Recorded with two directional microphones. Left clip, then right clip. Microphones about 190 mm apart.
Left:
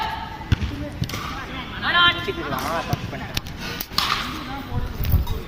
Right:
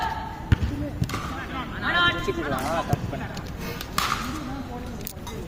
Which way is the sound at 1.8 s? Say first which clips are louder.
Left 5 dB; 70° right (ahead or behind).